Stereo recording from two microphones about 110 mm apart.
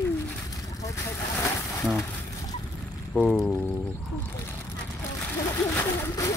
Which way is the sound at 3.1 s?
10° left (ahead or behind).